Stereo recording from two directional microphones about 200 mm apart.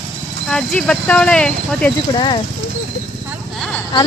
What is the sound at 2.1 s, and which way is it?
Speech, 25° left (ahead or behind).